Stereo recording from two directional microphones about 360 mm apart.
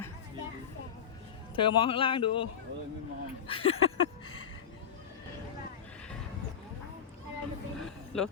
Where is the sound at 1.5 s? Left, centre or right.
Centre.